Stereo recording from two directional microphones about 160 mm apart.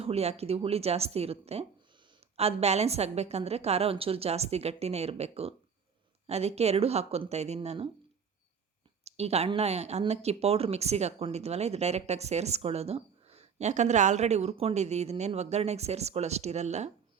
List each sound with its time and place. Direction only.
0.0 s a woman's voice: 40° right (ahead or behind)
9.0 s speech: 40° right (ahead or behind)